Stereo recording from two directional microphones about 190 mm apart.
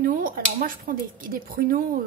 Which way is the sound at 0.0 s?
45° right (ahead or behind).